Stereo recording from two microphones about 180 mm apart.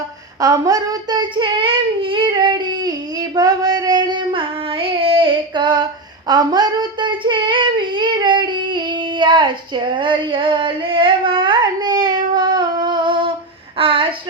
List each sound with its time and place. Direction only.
0.4 s child singing: 20° right (ahead or behind)
3.3 s female singing: 20° right (ahead or behind)
13.7 s a sound: 30° right (ahead or behind)